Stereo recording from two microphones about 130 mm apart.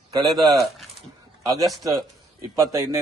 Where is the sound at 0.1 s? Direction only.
30° right (ahead or behind).